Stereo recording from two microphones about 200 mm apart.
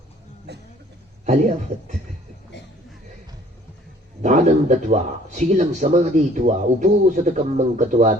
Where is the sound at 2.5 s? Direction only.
60° left (ahead or behind).